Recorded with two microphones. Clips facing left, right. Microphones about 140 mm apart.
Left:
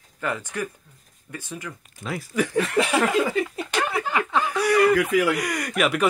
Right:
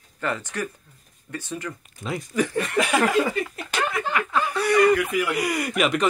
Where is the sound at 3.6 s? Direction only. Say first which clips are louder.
Left 1 dB; 30° left (ahead or behind).